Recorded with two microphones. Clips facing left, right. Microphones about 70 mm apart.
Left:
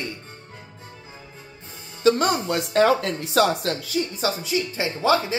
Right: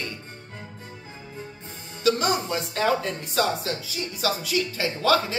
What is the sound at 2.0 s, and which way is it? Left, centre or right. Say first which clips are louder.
Speech: left 4 dB; left.